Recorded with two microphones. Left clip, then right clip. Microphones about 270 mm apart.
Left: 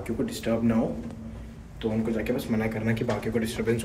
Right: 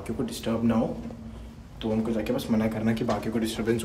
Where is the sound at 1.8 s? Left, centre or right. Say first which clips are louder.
Even; centre.